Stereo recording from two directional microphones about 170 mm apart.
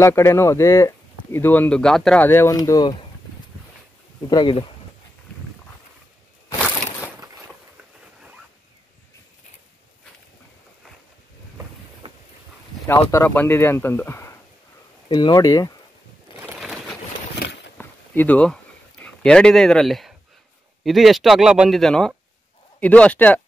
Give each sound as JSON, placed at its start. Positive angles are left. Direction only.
{"t": 0.0, "sound": "speech", "side_deg": 15}
{"t": 4.3, "sound": "speech", "side_deg": 25}
{"t": 12.8, "sound": "speech", "side_deg": 15}
{"t": 16.5, "sound": "a sound", "side_deg": 0}
{"t": 17.7, "sound": "a sound", "side_deg": 10}
{"t": 20.8, "sound": "a man's voice", "side_deg": 0}